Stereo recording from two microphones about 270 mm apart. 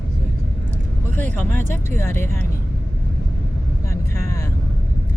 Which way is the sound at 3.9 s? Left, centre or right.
Centre.